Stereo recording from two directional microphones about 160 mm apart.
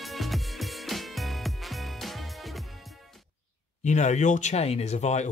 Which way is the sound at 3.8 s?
45° left (ahead or behind).